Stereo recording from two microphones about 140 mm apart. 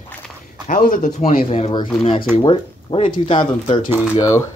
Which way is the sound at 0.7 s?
70° left (ahead or behind).